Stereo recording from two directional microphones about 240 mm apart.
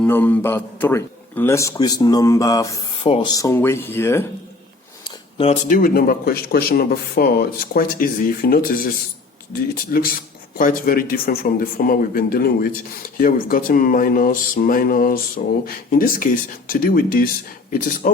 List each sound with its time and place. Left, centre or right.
0.0 s a man's voice: centre
5.0 s speech: left
9.9 s speech: left